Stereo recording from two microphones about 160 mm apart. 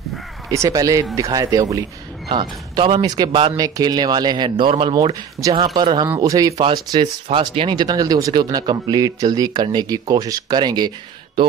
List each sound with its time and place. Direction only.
0.5 s speech: 20° right (ahead or behind); by 3.5 s 35° right (ahead or behind)
3.5 s speech: 20° right (ahead or behind)